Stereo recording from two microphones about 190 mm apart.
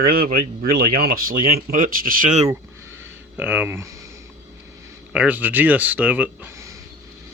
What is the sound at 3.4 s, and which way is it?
Speech, 10° right (ahead or behind).